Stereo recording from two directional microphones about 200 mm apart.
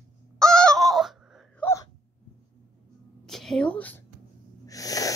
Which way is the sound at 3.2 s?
Centre (ahead or behind).